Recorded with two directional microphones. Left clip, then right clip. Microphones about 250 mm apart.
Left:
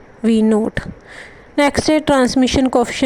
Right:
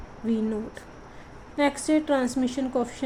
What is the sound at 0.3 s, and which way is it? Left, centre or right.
Speech, left.